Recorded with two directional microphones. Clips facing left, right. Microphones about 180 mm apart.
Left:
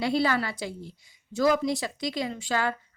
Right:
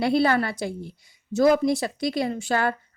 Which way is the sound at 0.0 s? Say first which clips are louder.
Right 4 dB; 55° right (ahead or behind).